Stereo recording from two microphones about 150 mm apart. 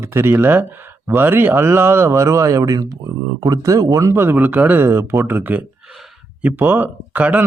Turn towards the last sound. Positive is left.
turn(degrees=-10)  # may be behind; listen again after turning